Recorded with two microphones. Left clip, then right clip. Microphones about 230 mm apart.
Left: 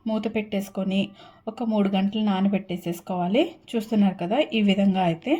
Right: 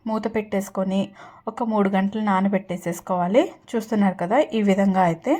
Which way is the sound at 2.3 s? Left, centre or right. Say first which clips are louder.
Right 4 dB; right.